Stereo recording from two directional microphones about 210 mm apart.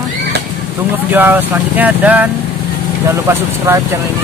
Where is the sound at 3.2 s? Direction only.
10° right (ahead or behind).